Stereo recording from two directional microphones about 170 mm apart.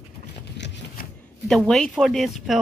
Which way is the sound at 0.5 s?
90° left.